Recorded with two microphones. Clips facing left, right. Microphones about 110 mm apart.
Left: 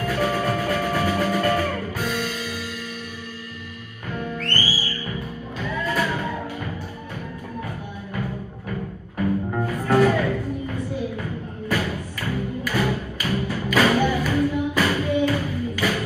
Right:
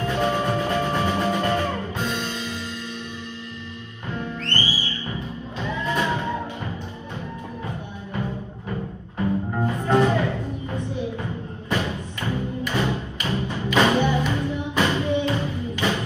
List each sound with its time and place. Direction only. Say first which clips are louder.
0.0 s music: even; 25° right (ahead or behind)
4.4 s music: left 1 dB; 20° right (ahead or behind)
9.7 s music: left 1 dB; 20° right (ahead or behind)
11.7 s music: even; 25° right (ahead or behind)